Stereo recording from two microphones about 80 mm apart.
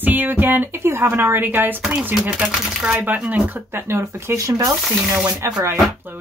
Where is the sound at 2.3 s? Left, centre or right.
Centre.